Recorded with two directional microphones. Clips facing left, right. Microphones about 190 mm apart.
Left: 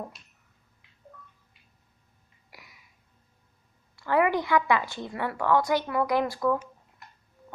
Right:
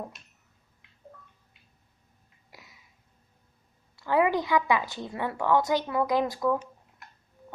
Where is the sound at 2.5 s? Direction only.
20° right (ahead or behind).